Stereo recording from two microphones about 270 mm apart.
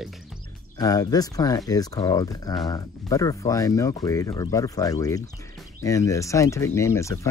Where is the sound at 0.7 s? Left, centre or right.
Centre.